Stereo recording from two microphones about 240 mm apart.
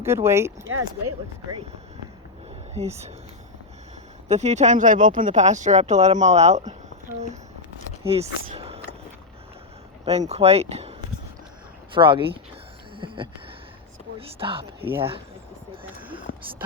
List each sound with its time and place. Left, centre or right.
0.0 s speech: centre
0.7 s speech: right
2.8 s speech: right
4.3 s speech: right
8.0 s speech: right
10.1 s speech: right
11.9 s speech: right
13.0 s a sound: right
14.2 s speech: right